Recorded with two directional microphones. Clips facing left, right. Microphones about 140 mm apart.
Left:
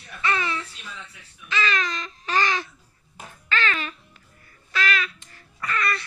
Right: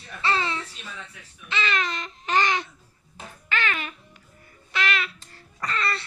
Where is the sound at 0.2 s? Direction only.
25° right (ahead or behind).